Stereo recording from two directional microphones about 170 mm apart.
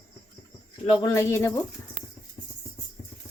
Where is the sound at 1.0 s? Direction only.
15° left (ahead or behind).